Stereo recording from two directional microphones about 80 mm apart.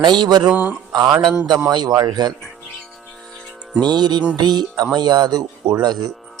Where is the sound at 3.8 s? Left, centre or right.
Right.